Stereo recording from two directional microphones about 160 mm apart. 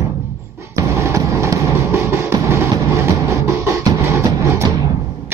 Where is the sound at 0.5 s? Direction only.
15° right (ahead or behind).